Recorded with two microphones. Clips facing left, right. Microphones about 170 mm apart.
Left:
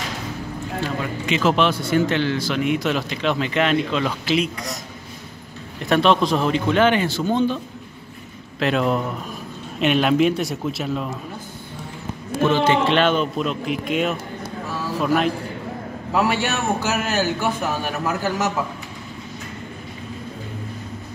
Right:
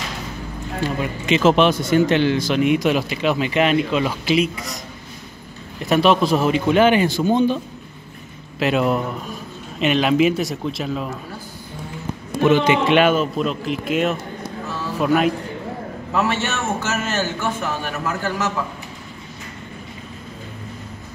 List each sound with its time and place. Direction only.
0.7 s a man's voice: 20° right (ahead or behind)
5.9 s a man's voice: 5° right (ahead or behind)
12.4 s a man's voice: 15° right (ahead or behind)
16.1 s a man's voice: 10° left (ahead or behind)